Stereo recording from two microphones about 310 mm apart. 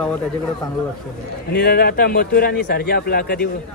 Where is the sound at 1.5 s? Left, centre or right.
Left.